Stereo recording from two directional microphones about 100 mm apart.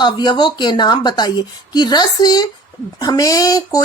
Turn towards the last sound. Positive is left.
turn(degrees=40)  # may be behind; listen again after turning